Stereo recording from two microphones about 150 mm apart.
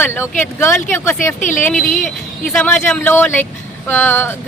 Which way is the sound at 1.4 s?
60° left (ahead or behind).